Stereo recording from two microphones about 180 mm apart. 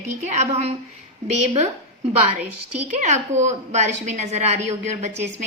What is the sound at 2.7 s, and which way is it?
A woman's voice, 40° right (ahead or behind).